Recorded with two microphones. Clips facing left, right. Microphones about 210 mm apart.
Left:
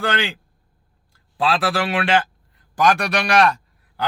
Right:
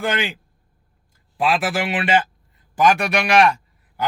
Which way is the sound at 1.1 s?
15° right (ahead or behind).